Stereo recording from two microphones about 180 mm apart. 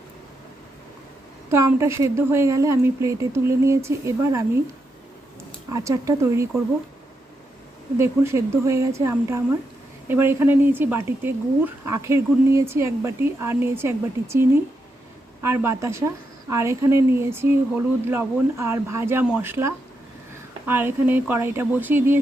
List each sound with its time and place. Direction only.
1.5 s speech: 15° right (ahead or behind)
5.7 s speech: 15° right (ahead or behind)
7.9 s speech: 15° right (ahead or behind)